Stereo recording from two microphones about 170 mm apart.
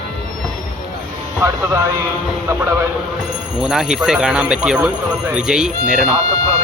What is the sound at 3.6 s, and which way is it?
Speech, 5° right (ahead or behind).